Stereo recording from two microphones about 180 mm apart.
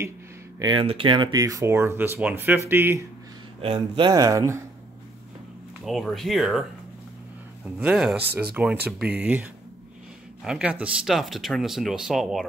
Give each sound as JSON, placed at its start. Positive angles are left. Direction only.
{"t": 0.6, "sound": "speech", "side_deg": -25}
{"t": 3.6, "sound": "speech", "side_deg": -30}
{"t": 5.9, "sound": "speech", "side_deg": 0}
{"t": 7.8, "sound": "speech", "side_deg": -5}
{"t": 8.2, "sound": "speech", "side_deg": -65}
{"t": 8.9, "sound": "speech", "side_deg": -5}